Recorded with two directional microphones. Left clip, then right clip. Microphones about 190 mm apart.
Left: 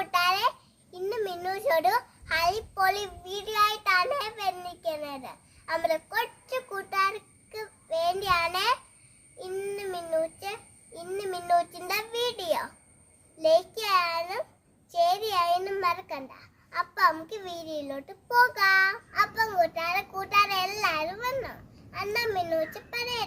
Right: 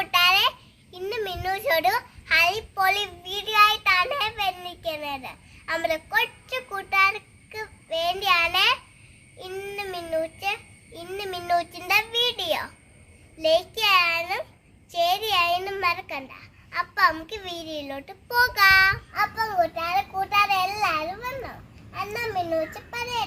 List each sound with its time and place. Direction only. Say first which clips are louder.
0.0 s a sound: right 5 dB; 15° left (ahead or behind)
2.8 s a child's voice: right 4 dB; 10° left (ahead or behind)
6.7 s child singing: right 7 dB; 15° left (ahead or behind)
9.4 s a child's voice: right 1 dB; 20° left (ahead or behind)
19.1 s a child's voice: right 1 dB; 25° left (ahead or behind)